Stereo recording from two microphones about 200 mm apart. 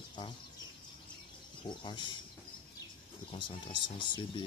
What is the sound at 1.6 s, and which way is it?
Speech, 25° left (ahead or behind).